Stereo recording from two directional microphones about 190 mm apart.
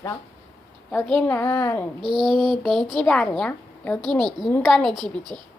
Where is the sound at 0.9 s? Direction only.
5° left (ahead or behind).